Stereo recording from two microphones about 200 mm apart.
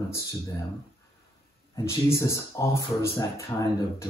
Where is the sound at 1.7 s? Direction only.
15° left (ahead or behind).